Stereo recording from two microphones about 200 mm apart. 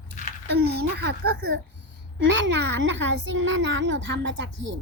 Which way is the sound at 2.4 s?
65° right (ahead or behind).